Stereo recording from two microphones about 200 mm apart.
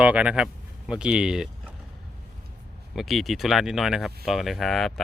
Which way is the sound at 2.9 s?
Centre (ahead or behind).